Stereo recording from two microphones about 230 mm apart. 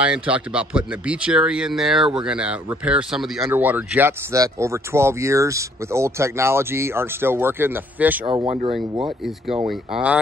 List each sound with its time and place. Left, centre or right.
0.0 s speech: centre